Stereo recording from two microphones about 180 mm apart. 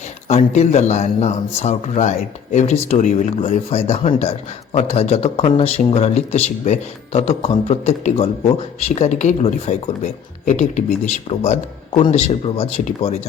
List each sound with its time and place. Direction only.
0.3 s speech: 40° left (ahead or behind)